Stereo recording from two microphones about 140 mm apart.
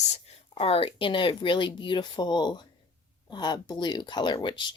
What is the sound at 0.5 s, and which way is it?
Speech, 45° left (ahead or behind).